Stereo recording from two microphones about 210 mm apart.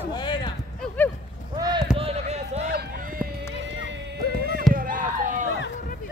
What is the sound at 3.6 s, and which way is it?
Clip-clop, 60° right (ahead or behind).